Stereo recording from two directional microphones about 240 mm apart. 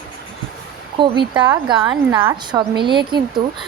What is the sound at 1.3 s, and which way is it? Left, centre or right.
A woman's voice, centre.